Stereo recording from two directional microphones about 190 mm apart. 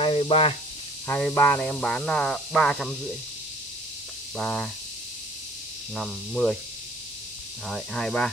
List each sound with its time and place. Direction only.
0.0 s speech: 30° left (ahead or behind)
1.0 s speech: 10° left (ahead or behind)
4.4 s speech: 5° left (ahead or behind)
5.9 s speech: 5° left (ahead or behind)
7.6 s speech: 5° left (ahead or behind)